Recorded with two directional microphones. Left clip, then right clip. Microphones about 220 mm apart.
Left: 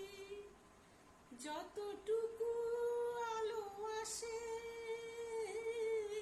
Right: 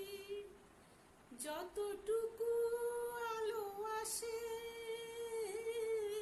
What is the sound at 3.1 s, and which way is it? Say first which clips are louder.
Music: even; 15° right (ahead or behind).